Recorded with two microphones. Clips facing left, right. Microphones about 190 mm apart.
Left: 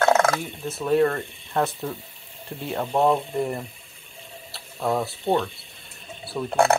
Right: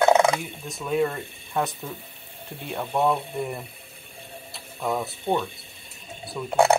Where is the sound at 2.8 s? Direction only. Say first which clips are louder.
Left 3 dB; 15° left (ahead or behind).